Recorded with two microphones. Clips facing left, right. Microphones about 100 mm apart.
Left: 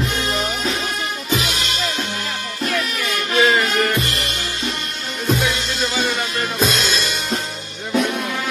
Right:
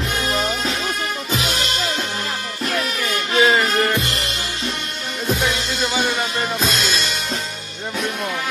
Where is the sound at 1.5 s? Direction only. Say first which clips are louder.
Right 1 dB; 35° right (ahead or behind).